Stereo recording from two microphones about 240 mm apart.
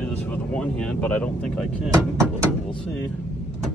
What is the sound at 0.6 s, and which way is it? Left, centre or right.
Speech, centre.